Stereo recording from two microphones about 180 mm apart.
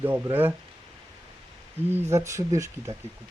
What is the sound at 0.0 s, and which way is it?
Speech, 10° right (ahead or behind).